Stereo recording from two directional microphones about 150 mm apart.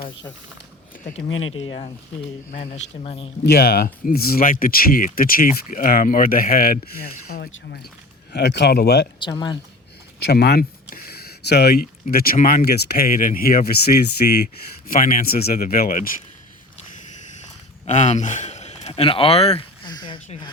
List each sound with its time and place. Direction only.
1.0 s speech: 40° left (ahead or behind)
2.5 s a man's voice: 50° left (ahead or behind)
3.4 s speech: 90° left
9.1 s speech: 30° left (ahead or behind)
10.3 s speech: 90° left
14.8 s speech: 65° left (ahead or behind)
17.8 s a man's voice: 50° left (ahead or behind)
19.8 s a sound: 30° left (ahead or behind)